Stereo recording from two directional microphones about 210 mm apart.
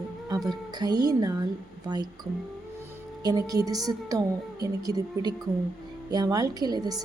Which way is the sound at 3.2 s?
15° right (ahead or behind).